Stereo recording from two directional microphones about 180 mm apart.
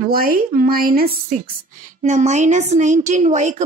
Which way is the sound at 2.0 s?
40° right (ahead or behind).